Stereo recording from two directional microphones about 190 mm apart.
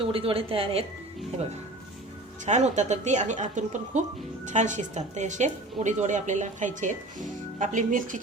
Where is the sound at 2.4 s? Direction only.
35° right (ahead or behind).